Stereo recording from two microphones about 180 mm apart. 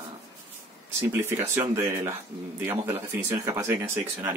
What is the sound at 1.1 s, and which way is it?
Speech, 15° right (ahead or behind).